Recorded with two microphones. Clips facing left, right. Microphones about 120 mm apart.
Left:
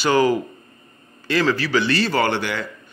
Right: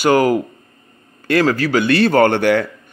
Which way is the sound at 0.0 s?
50° right (ahead or behind).